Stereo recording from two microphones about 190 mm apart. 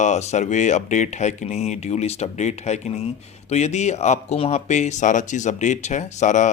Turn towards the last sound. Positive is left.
turn(degrees=40)  # may be behind; listen again after turning